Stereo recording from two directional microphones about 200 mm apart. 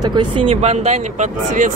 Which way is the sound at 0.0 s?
20° right (ahead or behind).